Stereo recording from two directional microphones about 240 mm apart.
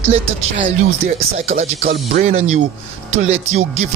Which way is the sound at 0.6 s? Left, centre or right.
Right.